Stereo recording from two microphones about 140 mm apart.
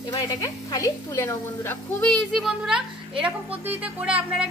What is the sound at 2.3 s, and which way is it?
A woman's voice, 5° right (ahead or behind).